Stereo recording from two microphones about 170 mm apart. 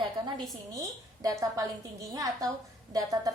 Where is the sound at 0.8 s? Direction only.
20° right (ahead or behind).